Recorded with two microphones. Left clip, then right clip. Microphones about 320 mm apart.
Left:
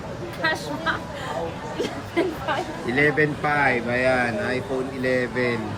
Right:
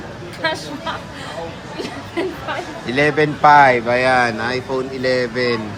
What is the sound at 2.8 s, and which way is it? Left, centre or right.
Speech, centre.